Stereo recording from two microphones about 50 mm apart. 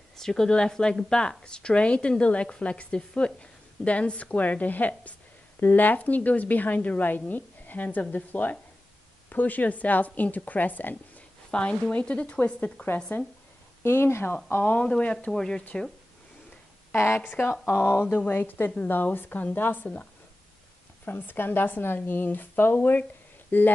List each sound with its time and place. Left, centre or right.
0.1 s a woman's voice: centre; by 11.2 s left
11.5 s speech: left
13.1 s speech: left
13.8 s speech: left
14.8 s speech: left
15.3 s a woman's voice: centre
16.9 s speech: left
18.0 s speech: left
18.3 s speech: left
21.0 s speech: left